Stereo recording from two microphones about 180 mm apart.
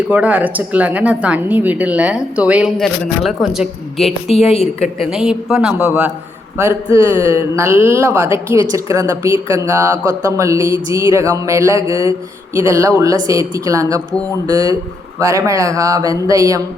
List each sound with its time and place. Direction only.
0.1 s speech: 10° right (ahead or behind)
4.4 s a woman's voice: 35° left (ahead or behind)
4.9 s speech: 5° right (ahead or behind)